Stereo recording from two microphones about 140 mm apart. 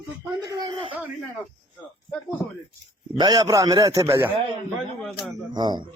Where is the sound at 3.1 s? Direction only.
25° right (ahead or behind).